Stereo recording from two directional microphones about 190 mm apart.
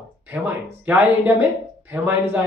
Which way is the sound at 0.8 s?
10° right (ahead or behind).